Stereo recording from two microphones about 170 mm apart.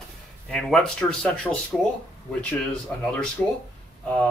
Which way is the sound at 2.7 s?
5° left (ahead or behind).